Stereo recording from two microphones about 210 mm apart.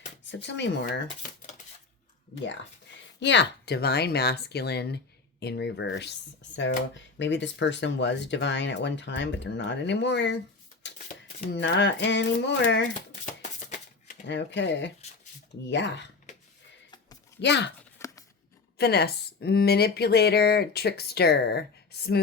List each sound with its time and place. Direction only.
0.3 s speech: 55° left (ahead or behind)
2.3 s speech: 60° left (ahead or behind)
10.9 s shuffling cards: 40° left (ahead or behind)
11.5 s speech: 55° left (ahead or behind)
13.4 s typewriter: 35° left (ahead or behind)
14.3 s speech: 55° left (ahead or behind)
17.4 s speech: 55° left (ahead or behind)
17.7 s a sound: 15° left (ahead or behind)
18.8 s speech: 50° left (ahead or behind)